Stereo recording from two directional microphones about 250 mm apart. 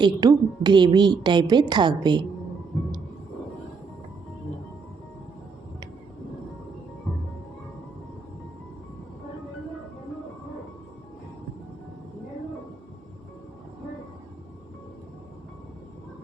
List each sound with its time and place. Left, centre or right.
0.0 s a woman's voice: centre